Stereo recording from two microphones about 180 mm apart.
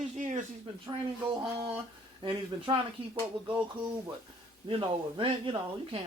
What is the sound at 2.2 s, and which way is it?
Speech, 25° right (ahead or behind).